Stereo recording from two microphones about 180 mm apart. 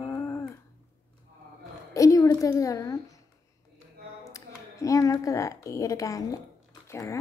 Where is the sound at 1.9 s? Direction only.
20° left (ahead or behind).